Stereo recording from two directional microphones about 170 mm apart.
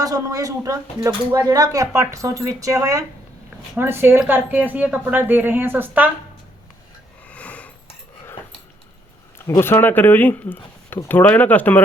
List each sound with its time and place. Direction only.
0.0 s a woman's voice: 20° right (ahead or behind)
7.3 s a sound: 10° left (ahead or behind)
9.5 s speech: 15° left (ahead or behind)